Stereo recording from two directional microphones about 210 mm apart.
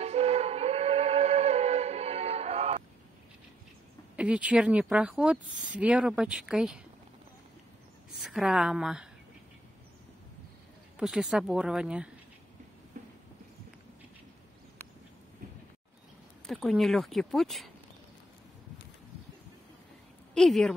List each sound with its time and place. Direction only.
0.0 s music: 30° right (ahead or behind)
4.2 s a woman's voice: 5° right (ahead or behind)
8.2 s a woman's voice: centre (ahead or behind)
11.0 s a woman's voice: 5° right (ahead or behind)
12.9 s a sound: 35° right (ahead or behind)
16.4 s a woman's voice: centre (ahead or behind)
20.3 s a woman's voice: centre (ahead or behind)